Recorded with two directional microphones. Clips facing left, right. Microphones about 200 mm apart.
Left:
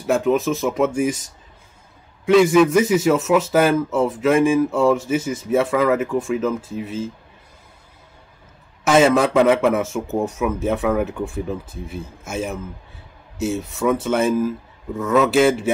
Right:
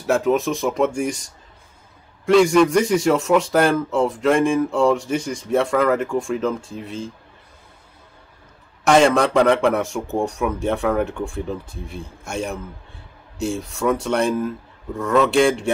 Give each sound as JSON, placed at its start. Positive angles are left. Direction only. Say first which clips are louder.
{"t": 0.0, "sound": "a man's voice", "louder": "even", "side_deg": 0}
{"t": 8.8, "sound": "a man's voice", "louder": "even", "side_deg": 5}